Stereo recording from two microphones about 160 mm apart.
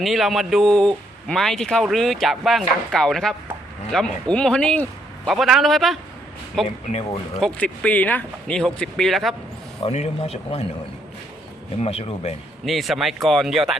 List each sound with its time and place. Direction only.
0.0 s a man's voice: centre (ahead or behind)
9.8 s speech: 40° left (ahead or behind)
11.8 s speech: 40° left (ahead or behind)
12.6 s a man's voice: centre (ahead or behind)